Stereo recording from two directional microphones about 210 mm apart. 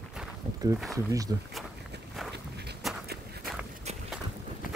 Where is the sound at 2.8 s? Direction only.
Centre (ahead or behind).